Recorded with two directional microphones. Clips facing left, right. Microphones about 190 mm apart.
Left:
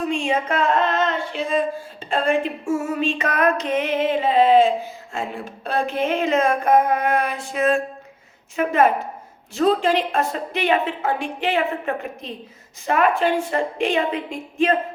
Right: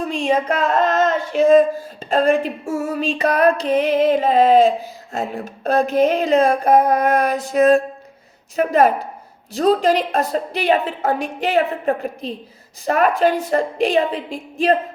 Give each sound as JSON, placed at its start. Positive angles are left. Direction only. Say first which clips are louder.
{"t": 0.1, "sound": "speech", "louder": "right 3 dB", "side_deg": -40}